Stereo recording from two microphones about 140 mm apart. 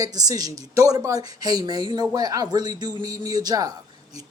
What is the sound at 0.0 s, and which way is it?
Speech, 25° right (ahead or behind).